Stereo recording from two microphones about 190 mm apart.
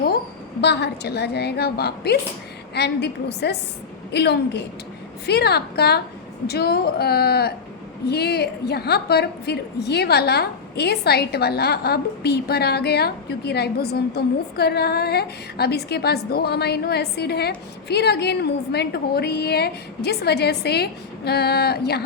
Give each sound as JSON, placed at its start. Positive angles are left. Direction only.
{"t": 0.6, "sound": "a woman's voice", "side_deg": 60}